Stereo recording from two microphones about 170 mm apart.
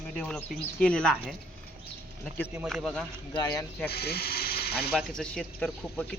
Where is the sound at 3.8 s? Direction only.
70° left (ahead or behind).